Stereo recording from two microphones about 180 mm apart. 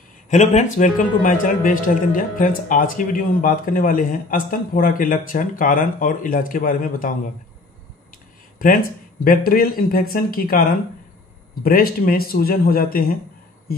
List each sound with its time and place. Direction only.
0.3 s speech: 40° left (ahead or behind)
9.2 s a man's voice: 55° left (ahead or behind)